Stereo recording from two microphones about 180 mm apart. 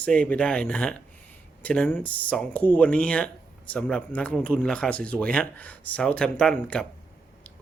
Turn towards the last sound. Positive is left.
turn(degrees=5)  # may be behind; listen again after turning